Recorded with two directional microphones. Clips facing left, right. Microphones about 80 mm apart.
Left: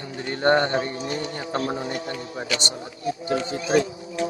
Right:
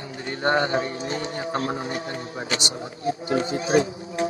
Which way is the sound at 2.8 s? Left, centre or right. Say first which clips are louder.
Right 2 dB; right.